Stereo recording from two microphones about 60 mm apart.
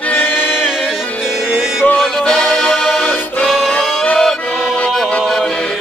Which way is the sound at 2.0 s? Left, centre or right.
Centre.